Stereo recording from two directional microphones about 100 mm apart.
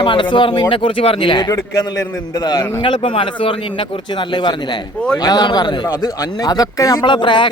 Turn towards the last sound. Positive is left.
turn(degrees=55)  # may be behind; listen again after turning